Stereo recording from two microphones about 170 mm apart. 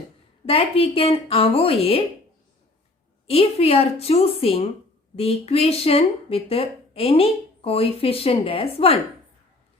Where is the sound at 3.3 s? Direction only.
35° left (ahead or behind).